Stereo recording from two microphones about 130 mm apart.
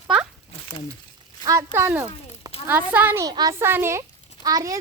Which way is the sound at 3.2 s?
30° right (ahead or behind).